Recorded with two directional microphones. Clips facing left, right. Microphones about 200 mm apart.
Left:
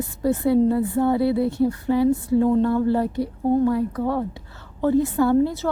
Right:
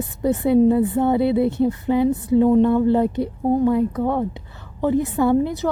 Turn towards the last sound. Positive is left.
turn(degrees=-15)  # may be behind; listen again after turning